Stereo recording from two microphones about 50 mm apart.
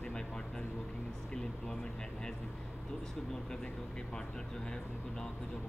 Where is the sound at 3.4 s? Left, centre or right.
Centre.